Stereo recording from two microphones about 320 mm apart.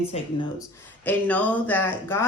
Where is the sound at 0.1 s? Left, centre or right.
Centre.